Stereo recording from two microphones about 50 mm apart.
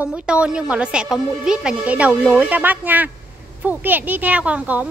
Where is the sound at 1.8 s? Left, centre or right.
Right.